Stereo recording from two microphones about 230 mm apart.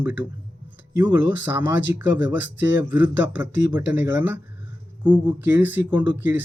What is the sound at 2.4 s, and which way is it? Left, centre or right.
Speech, left.